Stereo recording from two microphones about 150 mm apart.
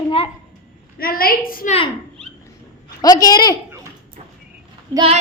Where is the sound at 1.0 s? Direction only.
80° left.